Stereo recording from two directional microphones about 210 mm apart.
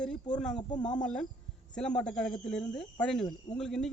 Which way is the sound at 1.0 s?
5° left (ahead or behind).